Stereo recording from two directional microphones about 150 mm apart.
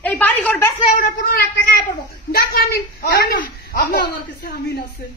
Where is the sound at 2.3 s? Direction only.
90° left.